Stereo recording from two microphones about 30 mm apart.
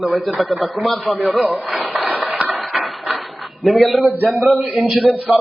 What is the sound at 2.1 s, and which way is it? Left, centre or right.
Music, right.